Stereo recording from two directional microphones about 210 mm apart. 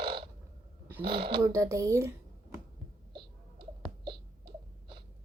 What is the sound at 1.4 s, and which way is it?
Speech, 15° right (ahead or behind).